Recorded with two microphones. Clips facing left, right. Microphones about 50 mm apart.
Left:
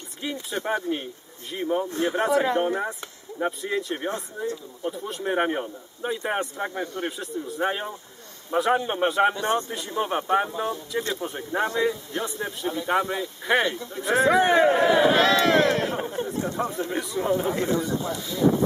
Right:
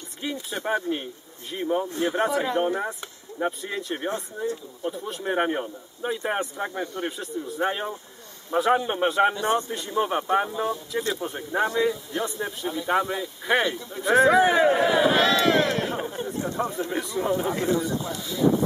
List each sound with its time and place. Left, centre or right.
0.2 s a man's voice: centre
15.2 s speech: left
16.0 s a man's voice: centre